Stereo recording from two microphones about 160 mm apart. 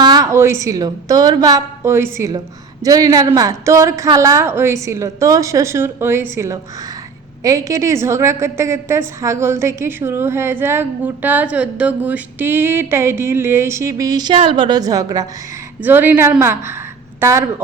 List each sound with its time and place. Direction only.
0.0 s a woman's voice: 25° right (ahead or behind)
15.8 s a woman's voice: 10° right (ahead or behind)